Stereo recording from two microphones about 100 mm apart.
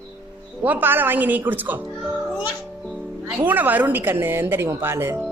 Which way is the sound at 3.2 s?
15° right (ahead or behind).